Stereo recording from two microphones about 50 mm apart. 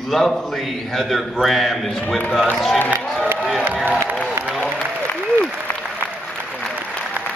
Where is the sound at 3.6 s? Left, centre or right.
Right.